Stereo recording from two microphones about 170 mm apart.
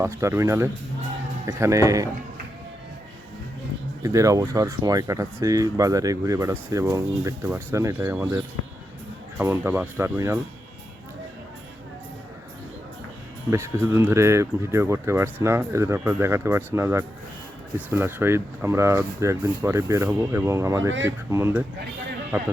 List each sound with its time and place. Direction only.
0.0 s speech: 15° right (ahead or behind)
4.0 s speech: 20° right (ahead or behind)
9.4 s speech: 15° right (ahead or behind)
13.5 s speech: 15° right (ahead or behind)